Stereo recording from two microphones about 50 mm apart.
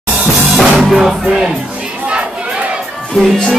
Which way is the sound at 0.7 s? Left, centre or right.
Centre.